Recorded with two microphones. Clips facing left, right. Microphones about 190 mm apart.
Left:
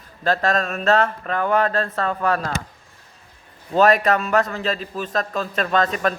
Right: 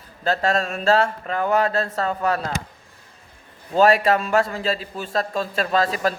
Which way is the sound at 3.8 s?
25° right (ahead or behind).